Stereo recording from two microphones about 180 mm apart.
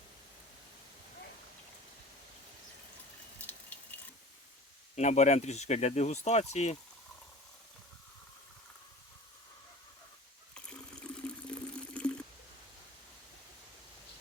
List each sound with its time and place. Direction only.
3.4 s a sound: 10° left (ahead or behind)
4.9 s speech: 40° left (ahead or behind)
10.5 s water: 5° left (ahead or behind)